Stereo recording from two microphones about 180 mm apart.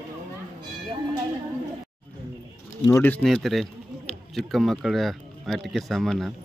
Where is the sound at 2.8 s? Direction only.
10° left (ahead or behind).